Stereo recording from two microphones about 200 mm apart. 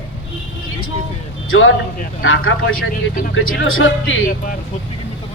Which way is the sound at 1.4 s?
90° left.